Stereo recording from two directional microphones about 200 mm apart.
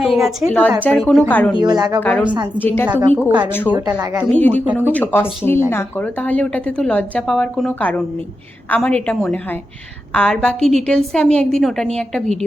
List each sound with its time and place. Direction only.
0.0 s a woman's voice: centre (ahead or behind)
1.6 s speech: 20° right (ahead or behind)
2.0 s a woman's voice: 10° left (ahead or behind)
3.2 s speech: 10° right (ahead or behind)
4.4 s a woman's voice: 10° left (ahead or behind)
4.6 s speech: 10° right (ahead or behind)
4.9 s a woman's voice: 10° left (ahead or behind)